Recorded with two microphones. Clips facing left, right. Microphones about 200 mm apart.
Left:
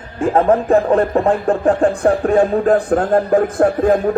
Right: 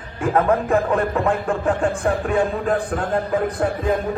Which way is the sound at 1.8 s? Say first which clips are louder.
Left 6 dB; 45° left (ahead or behind).